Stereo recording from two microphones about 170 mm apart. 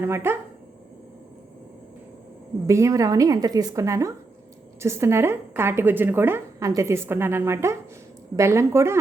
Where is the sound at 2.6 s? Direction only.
20° right (ahead or behind).